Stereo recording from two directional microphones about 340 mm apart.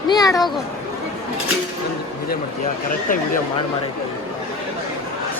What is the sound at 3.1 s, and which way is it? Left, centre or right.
Speech, left.